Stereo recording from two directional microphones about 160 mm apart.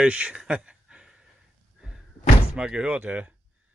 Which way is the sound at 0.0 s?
5° right (ahead or behind).